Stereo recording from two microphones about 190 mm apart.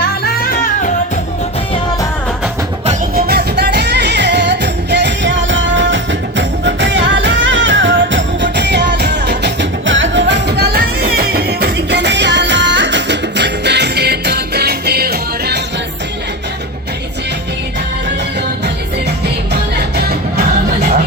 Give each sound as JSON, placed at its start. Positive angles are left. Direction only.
{"t": 0.0, "sound": "music", "side_deg": 50}
{"t": 3.2, "sound": "music", "side_deg": -55}
{"t": 20.0, "sound": "music", "side_deg": -60}